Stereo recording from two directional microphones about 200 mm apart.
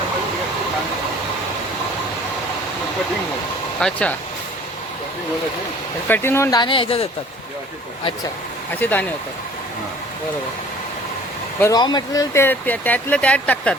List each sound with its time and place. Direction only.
3.8 s speech: 5° left (ahead or behind)
6.1 s speech: 10° left (ahead or behind); by 7.1 s 25° left (ahead or behind)
8.7 s speech: 10° left (ahead or behind)
11.6 s speech: 20° left (ahead or behind)